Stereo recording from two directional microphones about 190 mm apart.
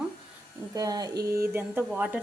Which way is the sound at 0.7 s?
20° right (ahead or behind).